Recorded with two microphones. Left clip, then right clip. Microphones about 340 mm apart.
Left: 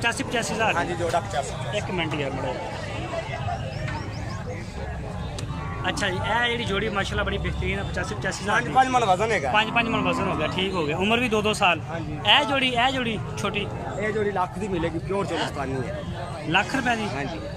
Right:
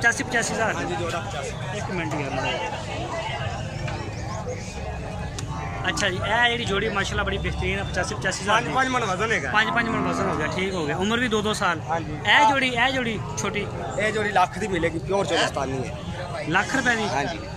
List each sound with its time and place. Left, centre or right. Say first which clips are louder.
0.0 s speech: right 3 dB; centre
5.9 s speech: right 1 dB; centre
9.5 s speech: right 1 dB; centre
13.9 s speech: right 4 dB; right
16.4 s speech: right 1 dB; centre